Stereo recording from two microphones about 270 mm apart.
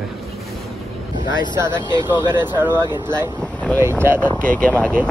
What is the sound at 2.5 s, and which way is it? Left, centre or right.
Speech, centre.